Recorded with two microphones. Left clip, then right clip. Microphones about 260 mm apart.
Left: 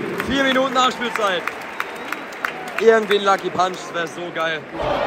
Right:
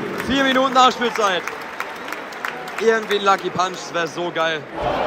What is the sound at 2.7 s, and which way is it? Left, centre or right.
Speech, centre.